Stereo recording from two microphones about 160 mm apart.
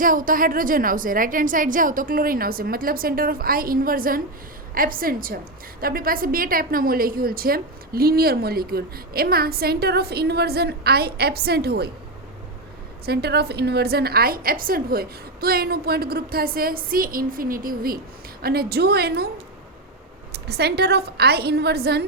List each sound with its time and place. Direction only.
0.0 s a woman's voice: 60° right (ahead or behind); by 11.9 s 85° right
13.1 s a woman's voice: 90° right; by 18.0 s 65° right (ahead or behind)
18.4 s a woman's voice: 75° right (ahead or behind)
20.3 s a woman's voice: 90° right